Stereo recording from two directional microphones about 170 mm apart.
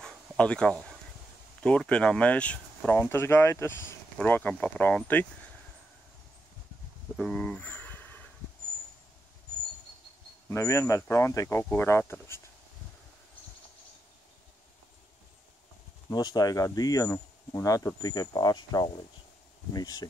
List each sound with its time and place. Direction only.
0.0 s dog: 5° left (ahead or behind)
1.6 s speech: 5° left (ahead or behind)
7.2 s a sound: 5° left (ahead or behind)
10.5 s speech: 15° left (ahead or behind)
16.1 s speech: 20° left (ahead or behind)